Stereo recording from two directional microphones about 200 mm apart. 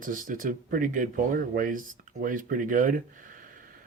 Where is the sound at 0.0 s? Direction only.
40° right (ahead or behind).